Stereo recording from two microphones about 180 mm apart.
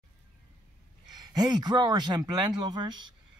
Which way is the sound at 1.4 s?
20° right (ahead or behind).